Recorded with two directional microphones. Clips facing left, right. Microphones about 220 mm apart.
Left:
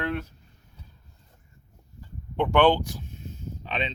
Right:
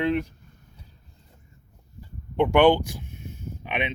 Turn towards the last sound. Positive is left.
turn(degrees=-15)  # may be behind; listen again after turning